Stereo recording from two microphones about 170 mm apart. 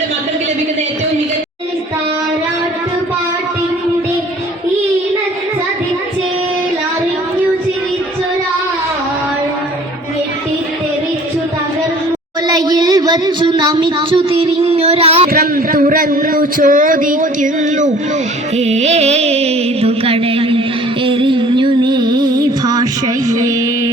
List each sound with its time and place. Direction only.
12.5 s speech: 25° right (ahead or behind)
15.3 s a man's voice: 60° right (ahead or behind)
18.5 s music: 40° right (ahead or behind); by 22.4 s 25° right (ahead or behind)
22.6 s a sound: 25° right (ahead or behind)
23.3 s music: 20° right (ahead or behind)